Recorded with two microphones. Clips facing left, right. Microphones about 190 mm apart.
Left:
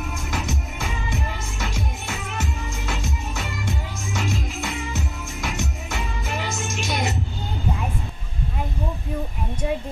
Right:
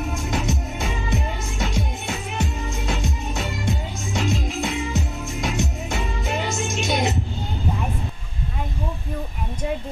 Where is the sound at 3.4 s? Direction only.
15° right (ahead or behind).